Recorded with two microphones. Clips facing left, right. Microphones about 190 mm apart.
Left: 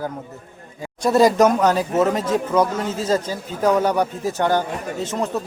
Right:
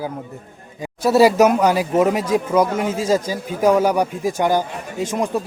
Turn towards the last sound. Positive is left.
turn(degrees=-10)  # may be behind; listen again after turning